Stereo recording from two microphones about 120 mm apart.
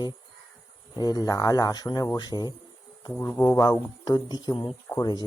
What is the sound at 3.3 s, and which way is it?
Speech, 20° left (ahead or behind).